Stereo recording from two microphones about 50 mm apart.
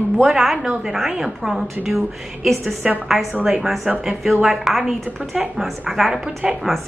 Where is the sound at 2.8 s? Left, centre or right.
Centre.